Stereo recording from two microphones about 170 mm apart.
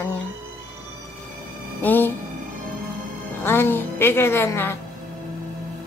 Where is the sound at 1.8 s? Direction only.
10° left (ahead or behind).